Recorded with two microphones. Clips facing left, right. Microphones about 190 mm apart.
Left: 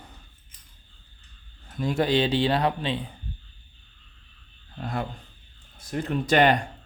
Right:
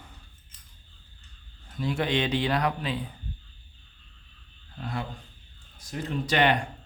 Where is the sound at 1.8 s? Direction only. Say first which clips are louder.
Left 4 dB; 40° left (ahead or behind).